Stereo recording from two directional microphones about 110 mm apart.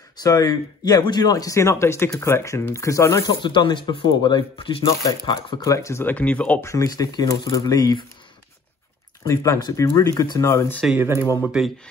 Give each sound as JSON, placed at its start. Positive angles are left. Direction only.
{"t": 0.2, "sound": "speech", "side_deg": 35}
{"t": 3.4, "sound": "speech", "side_deg": 45}
{"t": 5.6, "sound": "speech", "side_deg": 30}
{"t": 6.6, "sound": "speech", "side_deg": 30}
{"t": 9.2, "sound": "speech", "side_deg": 30}
{"t": 10.5, "sound": "speech", "side_deg": 25}
{"t": 11.0, "sound": "speech", "side_deg": -20}
{"t": 11.4, "sound": "speech", "side_deg": 0}